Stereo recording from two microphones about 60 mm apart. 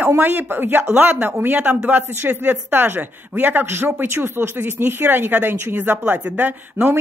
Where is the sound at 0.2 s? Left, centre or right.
Right.